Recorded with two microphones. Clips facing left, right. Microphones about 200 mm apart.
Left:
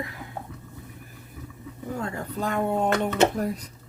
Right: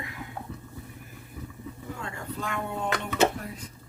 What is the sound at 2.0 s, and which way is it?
Speech, 40° left (ahead or behind).